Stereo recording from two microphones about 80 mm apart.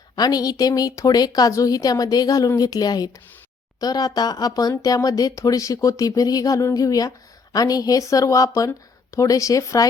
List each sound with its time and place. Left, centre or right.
0.2 s speech: left